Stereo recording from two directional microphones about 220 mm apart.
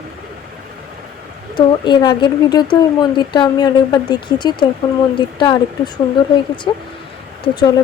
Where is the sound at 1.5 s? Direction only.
20° left (ahead or behind).